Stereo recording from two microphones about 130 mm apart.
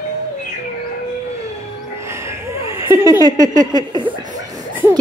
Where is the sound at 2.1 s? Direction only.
20° right (ahead or behind).